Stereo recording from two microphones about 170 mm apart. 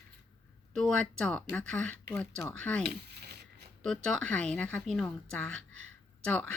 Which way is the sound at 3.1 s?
75° right (ahead or behind).